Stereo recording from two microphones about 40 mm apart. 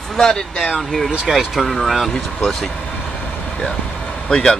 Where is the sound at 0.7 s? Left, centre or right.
Centre.